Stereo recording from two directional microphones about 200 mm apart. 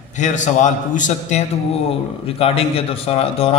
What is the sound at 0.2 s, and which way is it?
A man's voice, 40° left (ahead or behind).